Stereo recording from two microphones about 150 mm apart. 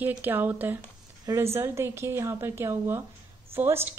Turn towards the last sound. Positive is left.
turn(degrees=-15)  # may be behind; listen again after turning